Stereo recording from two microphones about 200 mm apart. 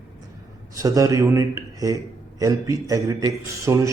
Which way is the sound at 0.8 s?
15° right (ahead or behind).